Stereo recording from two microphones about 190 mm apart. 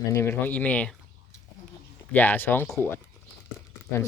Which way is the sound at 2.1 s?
10° left (ahead or behind).